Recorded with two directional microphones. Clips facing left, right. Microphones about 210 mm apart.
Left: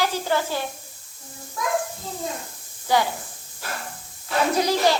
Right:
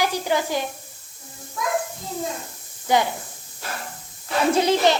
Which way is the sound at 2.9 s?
20° right (ahead or behind).